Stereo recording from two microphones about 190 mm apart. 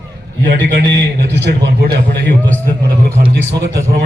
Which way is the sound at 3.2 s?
55° right (ahead or behind).